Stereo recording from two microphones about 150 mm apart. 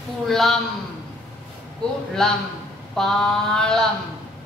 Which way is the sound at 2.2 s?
5° left (ahead or behind).